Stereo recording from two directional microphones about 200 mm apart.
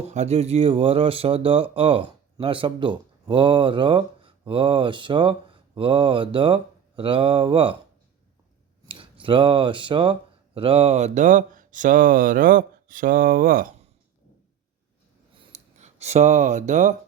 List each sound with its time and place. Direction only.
0.1 s speech: 35° right (ahead or behind)
8.9 s speech: 25° right (ahead or behind); by 13.7 s 45° right (ahead or behind)
15.4 s a sound: 35° right (ahead or behind)